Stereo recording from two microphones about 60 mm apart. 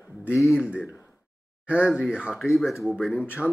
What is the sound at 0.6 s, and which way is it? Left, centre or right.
Speech, centre.